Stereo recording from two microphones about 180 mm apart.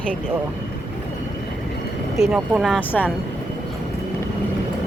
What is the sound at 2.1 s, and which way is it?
Speech, centre (ahead or behind).